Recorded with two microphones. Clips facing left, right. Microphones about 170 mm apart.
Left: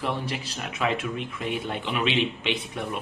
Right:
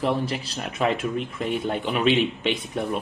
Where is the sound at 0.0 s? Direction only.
40° right (ahead or behind).